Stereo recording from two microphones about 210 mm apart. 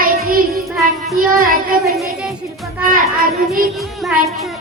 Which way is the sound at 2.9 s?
45° right (ahead or behind).